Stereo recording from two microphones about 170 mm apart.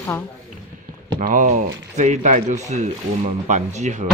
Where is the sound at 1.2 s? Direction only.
50° right (ahead or behind).